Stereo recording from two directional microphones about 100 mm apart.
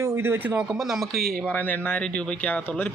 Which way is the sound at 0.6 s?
5° right (ahead or behind).